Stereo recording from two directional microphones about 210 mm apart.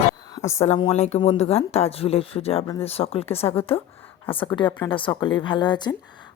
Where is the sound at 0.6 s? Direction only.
30° left (ahead or behind).